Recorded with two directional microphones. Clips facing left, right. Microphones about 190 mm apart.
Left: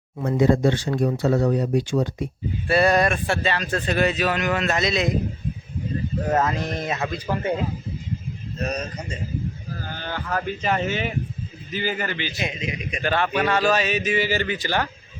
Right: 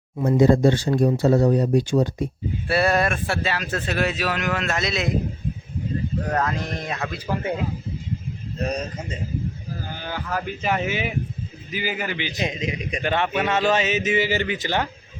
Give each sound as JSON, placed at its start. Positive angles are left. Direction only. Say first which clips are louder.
{"t": 0.3, "sound": "speech", "louder": "right 2 dB", "side_deg": -30}
{"t": 2.6, "sound": "speech", "louder": "left 2 dB", "side_deg": -5}
{"t": 6.3, "sound": "speech", "louder": "left 4 dB", "side_deg": 5}
{"t": 9.9, "sound": "speech", "louder": "left 1 dB", "side_deg": -10}
{"t": 12.4, "sound": "speech", "louder": "right 2 dB", "side_deg": -35}
{"t": 13.0, "sound": "speech", "louder": "left 1 dB", "side_deg": -20}